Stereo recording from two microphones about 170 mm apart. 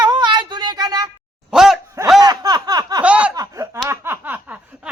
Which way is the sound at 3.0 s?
10° right (ahead or behind).